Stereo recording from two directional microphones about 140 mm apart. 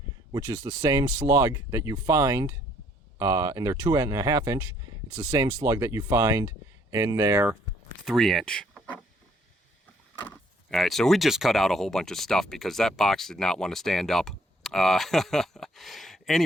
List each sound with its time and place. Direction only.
0.3 s speech: 25° right (ahead or behind)
8.0 s speech: centre (ahead or behind)
10.2 s power windows: 15° left (ahead or behind)
10.8 s speech: centre (ahead or behind)